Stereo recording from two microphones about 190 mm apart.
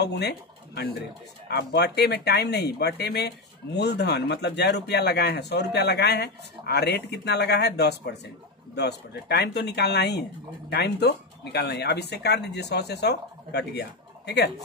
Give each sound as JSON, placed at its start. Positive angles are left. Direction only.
{"t": 0.0, "sound": "speech", "side_deg": 60}